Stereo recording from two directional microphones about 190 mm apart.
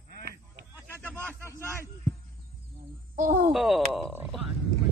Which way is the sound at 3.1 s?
45° right (ahead or behind).